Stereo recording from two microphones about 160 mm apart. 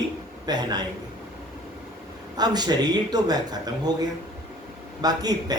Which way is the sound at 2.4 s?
25° right (ahead or behind).